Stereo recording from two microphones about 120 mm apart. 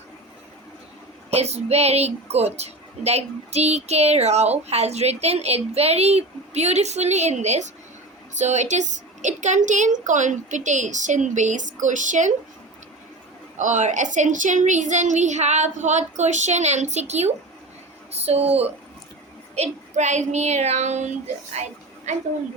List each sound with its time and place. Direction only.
1.3 s a woman's voice: 60° right (ahead or behind); by 12.3 s 90° right
13.6 s a woman's voice: 90° right; by 18.7 s 60° right (ahead or behind)
19.5 s speech: 70° right (ahead or behind)
21.5 s a sound: 70° right (ahead or behind)